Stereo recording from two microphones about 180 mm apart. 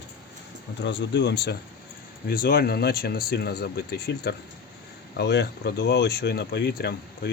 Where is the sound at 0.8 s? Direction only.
75° left (ahead or behind).